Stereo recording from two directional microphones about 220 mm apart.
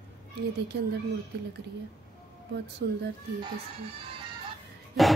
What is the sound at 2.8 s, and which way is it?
Speech, 50° right (ahead or behind).